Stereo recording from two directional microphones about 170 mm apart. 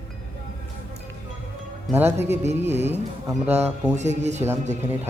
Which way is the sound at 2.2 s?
40° right (ahead or behind).